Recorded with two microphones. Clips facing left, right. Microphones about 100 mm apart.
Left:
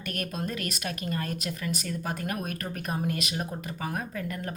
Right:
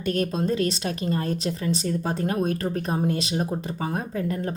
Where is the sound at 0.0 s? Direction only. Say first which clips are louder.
Right 9 dB; 30° right (ahead or behind).